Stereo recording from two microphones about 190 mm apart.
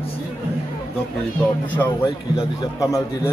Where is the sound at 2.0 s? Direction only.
25° left (ahead or behind).